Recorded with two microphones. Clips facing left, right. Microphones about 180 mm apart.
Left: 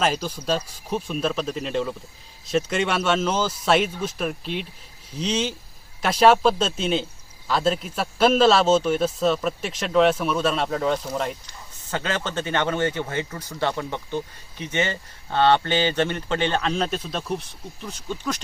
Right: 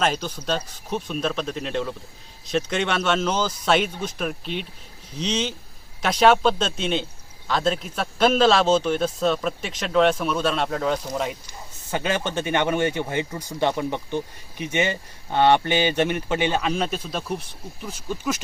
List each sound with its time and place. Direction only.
0.0 s a man's voice: 5° left (ahead or behind)
11.9 s a man's voice: 15° right (ahead or behind)